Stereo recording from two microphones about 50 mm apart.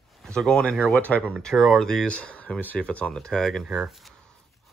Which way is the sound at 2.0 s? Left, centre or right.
Left.